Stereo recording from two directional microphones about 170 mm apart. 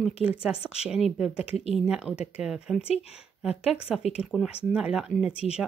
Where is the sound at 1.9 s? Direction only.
5° right (ahead or behind).